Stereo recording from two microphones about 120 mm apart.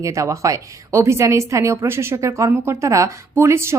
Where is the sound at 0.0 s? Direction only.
25° right (ahead or behind).